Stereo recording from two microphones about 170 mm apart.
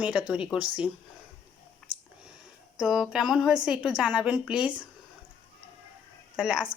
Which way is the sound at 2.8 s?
Centre (ahead or behind).